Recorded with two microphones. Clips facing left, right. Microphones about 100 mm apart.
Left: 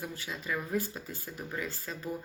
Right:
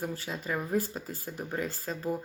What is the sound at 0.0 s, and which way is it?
Speech, 40° right (ahead or behind).